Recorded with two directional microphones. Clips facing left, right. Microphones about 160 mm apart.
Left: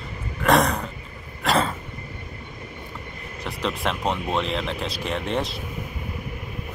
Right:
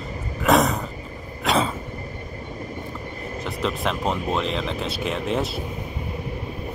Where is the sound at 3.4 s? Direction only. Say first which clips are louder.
Right 1 dB; centre (ahead or behind).